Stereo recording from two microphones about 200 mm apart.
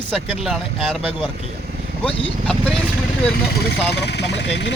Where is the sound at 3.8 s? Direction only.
55° left (ahead or behind).